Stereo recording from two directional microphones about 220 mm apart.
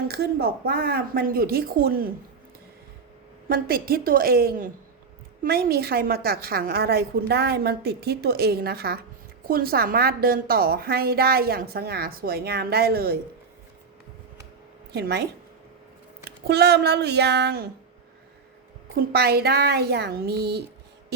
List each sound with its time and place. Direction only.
0.1 s a woman's voice: 45° right (ahead or behind)
3.5 s a woman's voice: 45° right (ahead or behind)
14.9 s a woman's voice: 50° right (ahead or behind)
16.5 s a woman's voice: 50° right (ahead or behind)
18.9 s a woman's voice: 45° right (ahead or behind)